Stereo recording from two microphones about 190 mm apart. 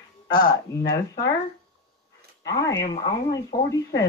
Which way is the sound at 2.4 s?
15° left (ahead or behind).